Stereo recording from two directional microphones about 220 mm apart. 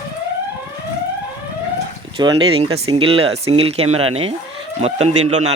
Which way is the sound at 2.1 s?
25° right (ahead or behind).